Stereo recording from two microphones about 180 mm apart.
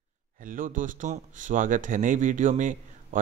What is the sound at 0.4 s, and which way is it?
Speech, 50° right (ahead or behind).